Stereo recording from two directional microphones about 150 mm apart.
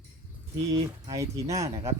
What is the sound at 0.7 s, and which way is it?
Speech, 20° right (ahead or behind).